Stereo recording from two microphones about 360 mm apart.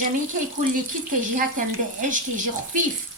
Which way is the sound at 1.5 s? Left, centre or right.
Right.